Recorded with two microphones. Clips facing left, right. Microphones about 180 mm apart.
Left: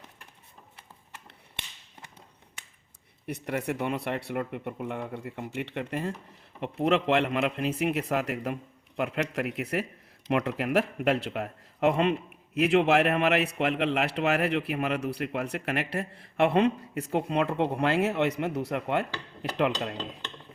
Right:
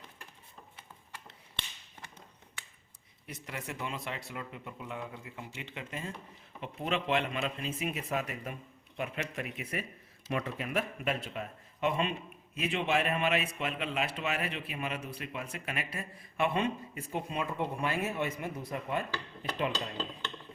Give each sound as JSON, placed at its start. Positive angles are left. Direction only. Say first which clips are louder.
{"t": 3.2, "sound": "speech", "louder": "left 11 dB", "side_deg": 60}